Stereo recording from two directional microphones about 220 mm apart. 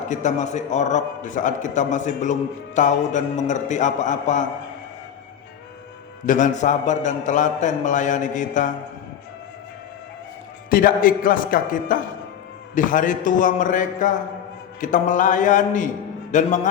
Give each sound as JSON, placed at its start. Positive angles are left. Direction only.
{"t": 0.1, "sound": "a man's voice", "side_deg": 35}
{"t": 6.2, "sound": "a man's voice", "side_deg": 35}
{"t": 10.7, "sound": "a man's voice", "side_deg": 40}